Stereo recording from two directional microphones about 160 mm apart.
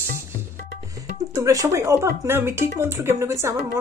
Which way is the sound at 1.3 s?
20° right (ahead or behind).